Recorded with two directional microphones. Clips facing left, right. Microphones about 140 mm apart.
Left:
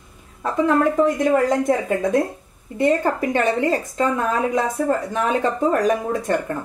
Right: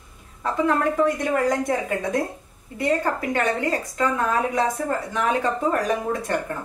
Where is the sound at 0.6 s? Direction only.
20° left (ahead or behind).